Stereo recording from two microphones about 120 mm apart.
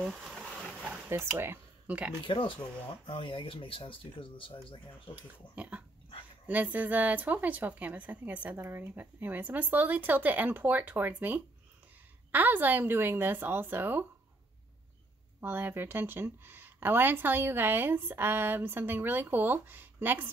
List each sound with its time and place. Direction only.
0.0 s a sound: 5° right (ahead or behind)
0.8 s speech: 20° right (ahead or behind)
2.2 s speech: 45° left (ahead or behind)
5.6 s dog: 10° right (ahead or behind)
6.4 s speech: 15° right (ahead or behind)
15.4 s speech: 20° right (ahead or behind)